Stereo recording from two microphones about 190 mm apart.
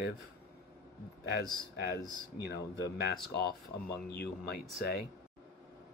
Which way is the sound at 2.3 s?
60° left (ahead or behind).